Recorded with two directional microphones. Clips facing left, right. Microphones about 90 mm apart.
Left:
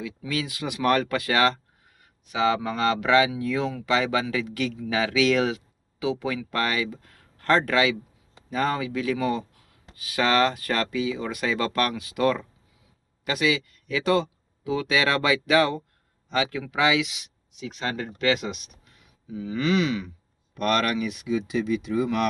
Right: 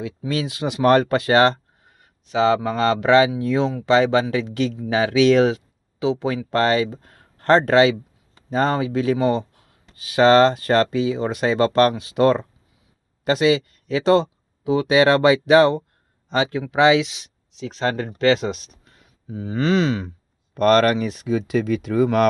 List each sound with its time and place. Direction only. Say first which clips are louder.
0.0 s speech: right 5 dB; 30° right (ahead or behind)